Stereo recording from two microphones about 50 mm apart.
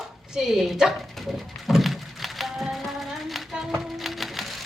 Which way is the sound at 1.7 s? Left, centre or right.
Centre.